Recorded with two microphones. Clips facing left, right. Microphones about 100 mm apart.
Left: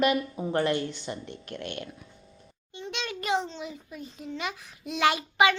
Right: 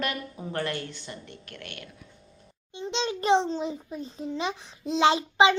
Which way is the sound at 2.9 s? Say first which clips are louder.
Right 6 dB; 25° right (ahead or behind).